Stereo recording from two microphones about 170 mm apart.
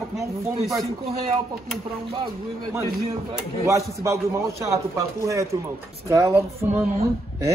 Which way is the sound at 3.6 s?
20° right (ahead or behind).